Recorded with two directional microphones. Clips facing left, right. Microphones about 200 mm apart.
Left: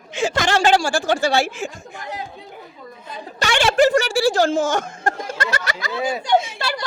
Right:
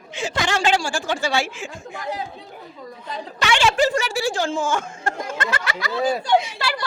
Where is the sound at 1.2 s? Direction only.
60° left (ahead or behind).